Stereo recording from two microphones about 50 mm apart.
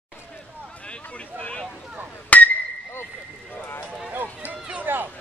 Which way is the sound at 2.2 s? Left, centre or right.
Left.